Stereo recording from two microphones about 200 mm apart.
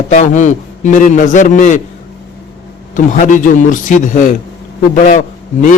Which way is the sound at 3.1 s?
40° left (ahead or behind).